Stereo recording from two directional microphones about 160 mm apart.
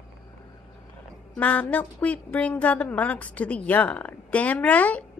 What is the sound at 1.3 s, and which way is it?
A woman's voice, 10° left (ahead or behind).